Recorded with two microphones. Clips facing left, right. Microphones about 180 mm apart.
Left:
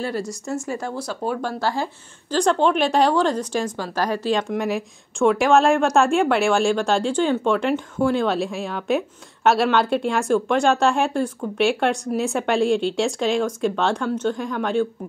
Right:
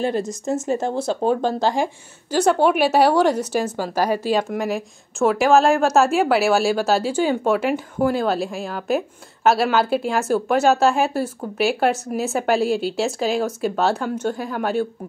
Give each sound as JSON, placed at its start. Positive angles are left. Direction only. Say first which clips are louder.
{"t": 0.0, "sound": "speech", "louder": "right 4 dB", "side_deg": -20}
{"t": 2.3, "sound": "speech", "louder": "right 2 dB", "side_deg": -10}